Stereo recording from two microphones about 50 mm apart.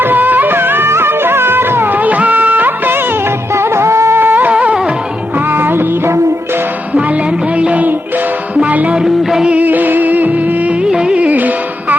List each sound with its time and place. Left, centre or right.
0.0 s music: right
2.0 s music of bollywood: right
3.5 s music: right
4.2 s music: right
5.5 s music: right
6.9 s music: right
9.0 s music: centre
9.5 s music: right
10.8 s music: centre
11.3 s music: right